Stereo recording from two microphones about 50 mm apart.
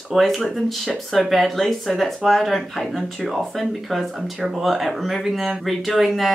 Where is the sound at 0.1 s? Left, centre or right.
Centre.